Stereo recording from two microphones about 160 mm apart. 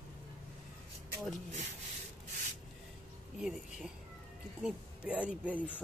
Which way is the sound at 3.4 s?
5° right (ahead or behind).